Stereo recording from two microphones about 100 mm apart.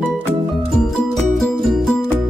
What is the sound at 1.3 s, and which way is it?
Music, centre (ahead or behind).